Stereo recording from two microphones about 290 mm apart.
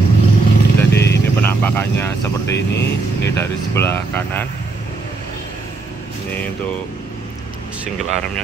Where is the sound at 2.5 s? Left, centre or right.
Left.